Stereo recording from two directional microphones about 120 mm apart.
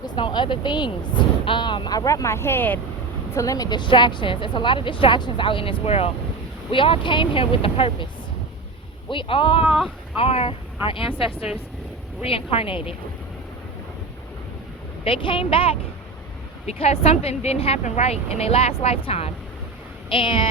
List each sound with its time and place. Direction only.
0.0 s speech: 40° left (ahead or behind); by 2.8 s 15° left (ahead or behind)
3.3 s speech: 30° left (ahead or behind); by 8.0 s 50° left (ahead or behind)
9.0 s speech: 45° left (ahead or behind)
9.6 s speech: 5° right (ahead or behind)
10.2 s speech: 55° left (ahead or behind)
12.2 s speech: 50° left (ahead or behind)
15.0 s speech: 45° left (ahead or behind)